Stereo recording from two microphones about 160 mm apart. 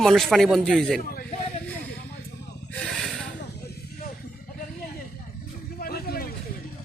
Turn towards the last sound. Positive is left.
turn(degrees=70)  # may be behind; listen again after turning